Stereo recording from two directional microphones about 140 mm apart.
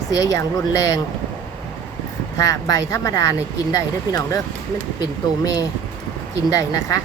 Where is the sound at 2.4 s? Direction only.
25° left (ahead or behind).